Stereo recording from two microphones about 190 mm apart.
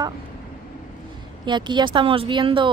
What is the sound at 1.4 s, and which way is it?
Speech, 25° right (ahead or behind).